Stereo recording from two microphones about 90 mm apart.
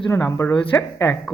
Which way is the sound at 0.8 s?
30° left (ahead or behind).